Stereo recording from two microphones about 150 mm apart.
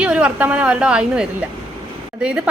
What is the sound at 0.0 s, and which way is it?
A woman's voice, 10° right (ahead or behind).